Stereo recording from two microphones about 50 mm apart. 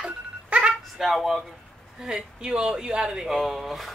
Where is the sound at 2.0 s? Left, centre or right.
Centre.